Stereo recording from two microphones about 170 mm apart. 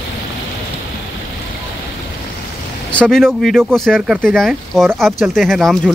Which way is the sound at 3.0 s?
Centre (ahead or behind).